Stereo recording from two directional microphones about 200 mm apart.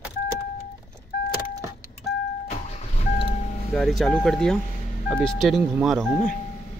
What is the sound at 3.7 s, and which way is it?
Speech, centre (ahead or behind).